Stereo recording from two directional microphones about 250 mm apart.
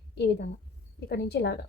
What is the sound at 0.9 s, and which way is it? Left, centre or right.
Speech, left.